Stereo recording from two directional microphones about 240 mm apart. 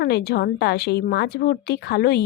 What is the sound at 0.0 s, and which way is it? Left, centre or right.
A woman's voice, left.